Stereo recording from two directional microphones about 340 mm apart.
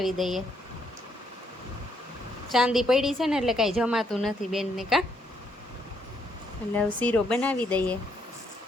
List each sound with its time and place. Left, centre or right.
0.0 s a woman's voice: centre
2.5 s a woman's voice: centre
6.7 s a woman's voice: centre